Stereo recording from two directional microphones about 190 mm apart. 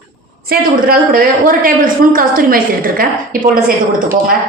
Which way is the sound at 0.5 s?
50° right (ahead or behind).